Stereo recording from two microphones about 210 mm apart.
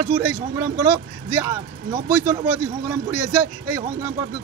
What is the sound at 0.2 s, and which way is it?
A man's voice, 15° right (ahead or behind).